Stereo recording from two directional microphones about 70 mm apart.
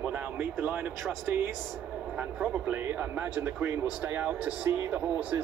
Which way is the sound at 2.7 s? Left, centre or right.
Right.